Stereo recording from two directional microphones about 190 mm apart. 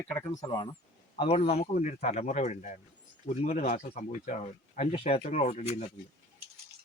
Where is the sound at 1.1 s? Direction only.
30° left (ahead or behind).